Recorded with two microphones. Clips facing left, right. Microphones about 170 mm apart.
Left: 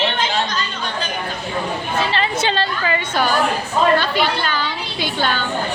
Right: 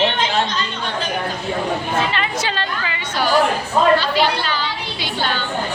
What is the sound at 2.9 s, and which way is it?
Chatter, 50° left (ahead or behind).